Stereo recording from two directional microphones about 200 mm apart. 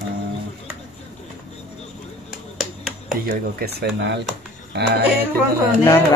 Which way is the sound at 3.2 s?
45° right (ahead or behind).